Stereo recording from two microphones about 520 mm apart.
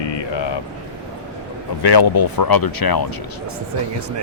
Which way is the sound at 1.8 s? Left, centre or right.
Left.